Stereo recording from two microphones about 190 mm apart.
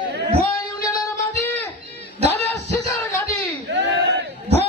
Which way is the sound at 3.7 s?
70° right (ahead or behind).